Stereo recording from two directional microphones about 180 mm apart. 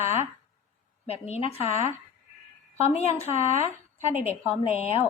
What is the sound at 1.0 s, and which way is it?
A woman's voice, 35° left (ahead or behind).